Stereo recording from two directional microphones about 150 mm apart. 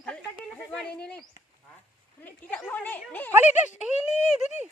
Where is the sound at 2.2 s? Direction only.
10° left (ahead or behind).